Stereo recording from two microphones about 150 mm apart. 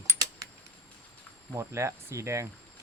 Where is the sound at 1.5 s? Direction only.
20° right (ahead or behind).